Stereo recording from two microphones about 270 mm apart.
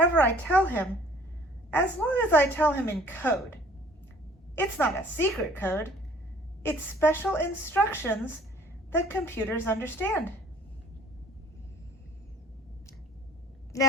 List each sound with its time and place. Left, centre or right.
0.2 s a woman's voice: centre
4.5 s a woman's voice: centre
13.7 s speech: centre